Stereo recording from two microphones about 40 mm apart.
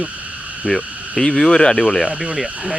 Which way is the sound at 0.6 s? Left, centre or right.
Centre.